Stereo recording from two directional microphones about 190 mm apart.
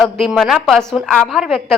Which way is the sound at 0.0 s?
Centre (ahead or behind).